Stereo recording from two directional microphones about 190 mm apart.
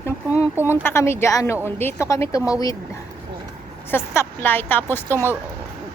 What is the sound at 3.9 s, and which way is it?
A woman's voice, 10° left (ahead or behind).